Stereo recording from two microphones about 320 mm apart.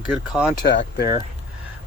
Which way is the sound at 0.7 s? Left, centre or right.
Left.